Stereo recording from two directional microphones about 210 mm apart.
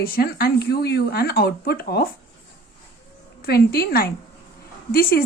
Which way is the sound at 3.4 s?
45° left (ahead or behind).